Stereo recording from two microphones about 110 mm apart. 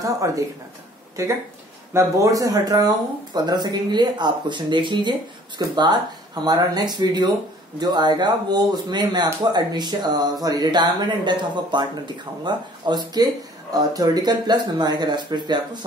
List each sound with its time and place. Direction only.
0.2 s speech: 30° right (ahead or behind)